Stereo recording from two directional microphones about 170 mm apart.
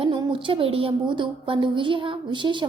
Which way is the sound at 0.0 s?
30° right (ahead or behind).